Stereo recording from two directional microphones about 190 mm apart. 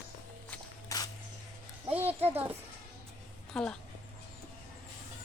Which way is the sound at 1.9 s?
10° right (ahead or behind).